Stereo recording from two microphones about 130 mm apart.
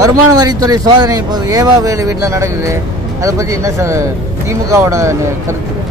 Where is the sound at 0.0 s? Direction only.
30° right (ahead or behind).